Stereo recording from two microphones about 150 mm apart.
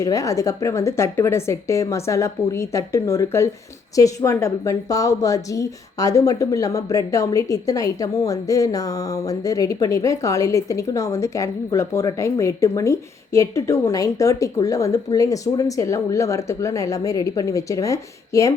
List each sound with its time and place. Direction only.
0.0 s a woman's voice: 20° left (ahead or behind)